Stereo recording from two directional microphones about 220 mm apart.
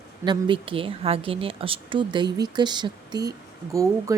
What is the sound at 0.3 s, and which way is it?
A woman's voice, 20° right (ahead or behind).